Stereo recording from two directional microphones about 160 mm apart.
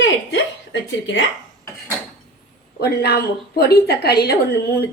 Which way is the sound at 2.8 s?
75° left (ahead or behind).